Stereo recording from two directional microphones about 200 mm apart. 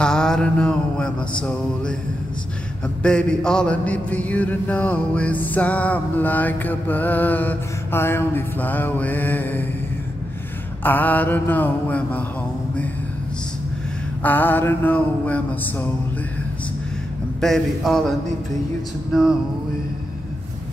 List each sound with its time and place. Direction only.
0.0 s mantra: 5° left (ahead or behind)
1.4 s a man's voice: 5° left (ahead or behind)
3.0 s mantra: 5° left (ahead or behind)
10.8 s mantra: 10° left (ahead or behind)
14.2 s mantra: 10° left (ahead or behind)
17.4 s a man's voice: centre (ahead or behind)